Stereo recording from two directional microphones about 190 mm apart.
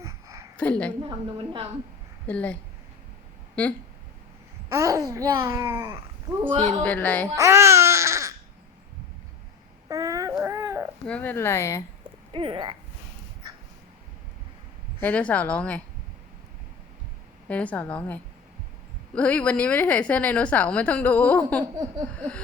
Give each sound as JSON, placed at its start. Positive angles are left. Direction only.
{"t": 0.0, "sound": "a sound", "side_deg": -15}
{"t": 0.5, "sound": "a woman's voice", "side_deg": 5}
{"t": 1.0, "sound": "a woman's voice", "side_deg": -25}
{"t": 2.2, "sound": "a woman's voice", "side_deg": 5}
{"t": 4.7, "sound": "a child's voice", "side_deg": -15}
{"t": 6.7, "sound": "a woman's voice", "side_deg": 10}
{"t": 7.3, "sound": "babbling", "side_deg": -15}
{"t": 9.9, "sound": "baby cry", "side_deg": -20}
{"t": 11.0, "sound": "a woman's voice", "side_deg": 10}
{"t": 12.3, "sound": "a woman's voice", "side_deg": -25}
{"t": 15.0, "sound": "a woman's voice", "side_deg": 10}
{"t": 17.5, "sound": "a woman's voice", "side_deg": 5}